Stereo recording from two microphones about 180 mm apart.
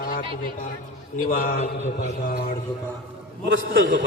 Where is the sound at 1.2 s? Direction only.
50° left (ahead or behind).